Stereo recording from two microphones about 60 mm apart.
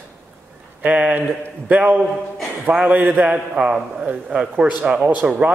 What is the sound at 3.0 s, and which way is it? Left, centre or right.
A man's voice, centre.